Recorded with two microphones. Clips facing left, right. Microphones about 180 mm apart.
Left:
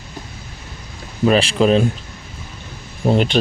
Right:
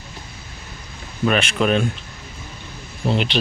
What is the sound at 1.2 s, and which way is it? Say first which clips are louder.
Speech: left 5 dB; 30° left (ahead or behind).